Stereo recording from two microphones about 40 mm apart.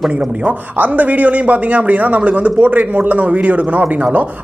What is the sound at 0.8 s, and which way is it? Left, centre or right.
A man's voice, right.